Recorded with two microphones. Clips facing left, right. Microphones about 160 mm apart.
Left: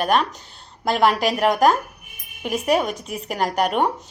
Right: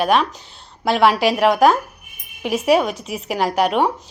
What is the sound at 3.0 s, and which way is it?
Speech, 45° left (ahead or behind).